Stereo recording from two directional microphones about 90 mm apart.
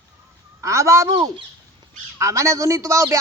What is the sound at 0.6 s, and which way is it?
Speech, 35° right (ahead or behind).